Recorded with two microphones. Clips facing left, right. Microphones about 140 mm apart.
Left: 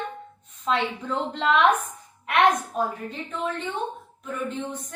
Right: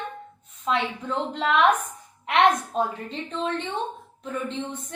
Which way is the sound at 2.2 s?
25° right (ahead or behind).